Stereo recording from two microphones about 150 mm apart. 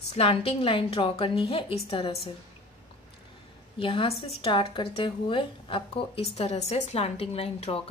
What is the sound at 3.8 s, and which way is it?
Speech, 35° left (ahead or behind).